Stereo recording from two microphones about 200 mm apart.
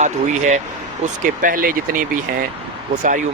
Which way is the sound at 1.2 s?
45° right (ahead or behind).